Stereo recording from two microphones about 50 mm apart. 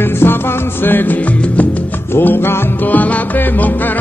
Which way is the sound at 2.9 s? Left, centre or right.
Left.